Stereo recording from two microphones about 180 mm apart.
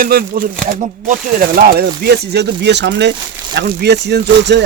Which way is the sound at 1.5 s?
60° right (ahead or behind).